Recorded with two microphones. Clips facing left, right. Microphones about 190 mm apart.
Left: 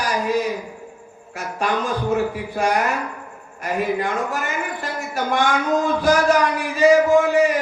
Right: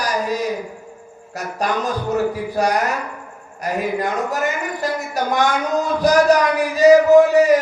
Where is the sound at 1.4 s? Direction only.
40° right (ahead or behind).